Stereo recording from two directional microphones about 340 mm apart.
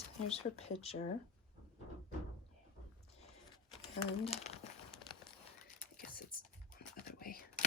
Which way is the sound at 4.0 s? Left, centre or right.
Centre.